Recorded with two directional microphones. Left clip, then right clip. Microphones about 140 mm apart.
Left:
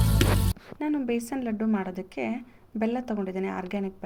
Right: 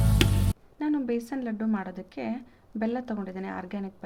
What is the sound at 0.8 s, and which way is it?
A woman's voice, 5° left (ahead or behind).